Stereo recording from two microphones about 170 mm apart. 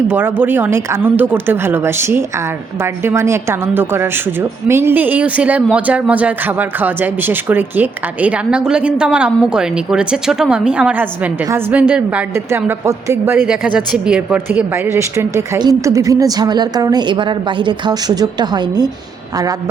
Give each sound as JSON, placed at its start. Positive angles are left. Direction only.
{"t": 0.1, "sound": "a woman's voice", "side_deg": -10}
{"t": 13.5, "sound": "a woman's voice", "side_deg": -5}